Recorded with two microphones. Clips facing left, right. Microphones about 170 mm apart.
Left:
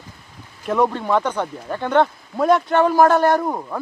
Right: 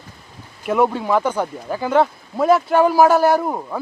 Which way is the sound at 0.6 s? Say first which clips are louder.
Right 1 dB; 5° right (ahead or behind).